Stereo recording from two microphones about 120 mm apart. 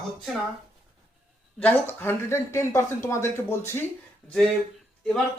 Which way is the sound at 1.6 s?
15° left (ahead or behind).